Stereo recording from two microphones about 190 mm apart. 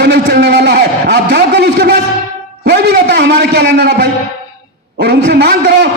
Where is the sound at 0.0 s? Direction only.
70° right (ahead or behind).